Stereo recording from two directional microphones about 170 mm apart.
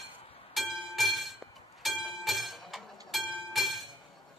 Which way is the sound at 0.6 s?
Centre (ahead or behind).